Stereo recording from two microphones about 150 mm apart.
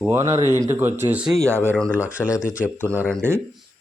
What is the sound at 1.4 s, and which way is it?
Speech, 15° right (ahead or behind).